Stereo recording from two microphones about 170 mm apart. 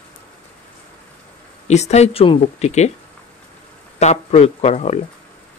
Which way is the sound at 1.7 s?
40° left (ahead or behind).